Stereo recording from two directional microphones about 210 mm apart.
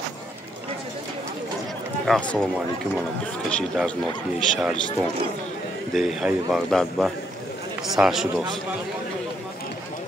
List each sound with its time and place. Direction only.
2.0 s speech: 5° left (ahead or behind)
3.4 s speech: 5° left (ahead or behind)
5.9 s speech: centre (ahead or behind)